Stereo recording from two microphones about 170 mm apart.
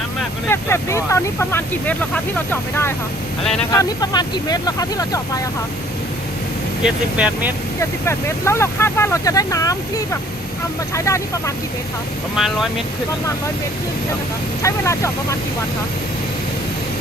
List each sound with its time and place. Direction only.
0.4 s speech: 15° left (ahead or behind)
3.7 s speech: 20° left (ahead or behind)
6.8 s speech: 5° right (ahead or behind)
7.8 s speech: 15° left (ahead or behind)
12.4 s speech: centre (ahead or behind)
14.6 s speech: 15° left (ahead or behind)